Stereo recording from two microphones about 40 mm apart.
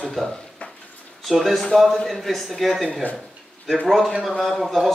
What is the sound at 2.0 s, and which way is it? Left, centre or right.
A man's voice, centre.